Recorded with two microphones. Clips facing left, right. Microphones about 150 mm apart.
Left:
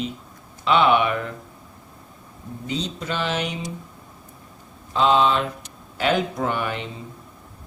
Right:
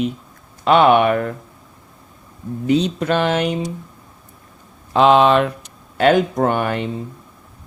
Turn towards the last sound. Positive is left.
turn(degrees=-55)  # may be behind; listen again after turning